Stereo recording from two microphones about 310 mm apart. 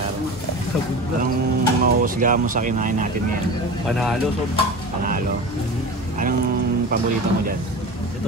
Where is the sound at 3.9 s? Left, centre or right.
Centre.